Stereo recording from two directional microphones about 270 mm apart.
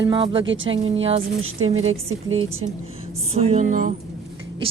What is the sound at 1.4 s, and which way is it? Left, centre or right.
A woman's voice, right.